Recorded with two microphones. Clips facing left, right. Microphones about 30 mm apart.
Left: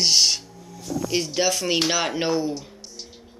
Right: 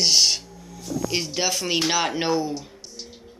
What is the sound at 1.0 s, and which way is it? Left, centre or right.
A man's voice, centre.